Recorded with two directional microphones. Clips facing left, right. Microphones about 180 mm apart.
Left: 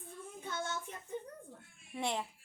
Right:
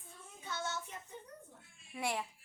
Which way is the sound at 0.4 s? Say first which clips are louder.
Left 1 dB; 50° left (ahead or behind).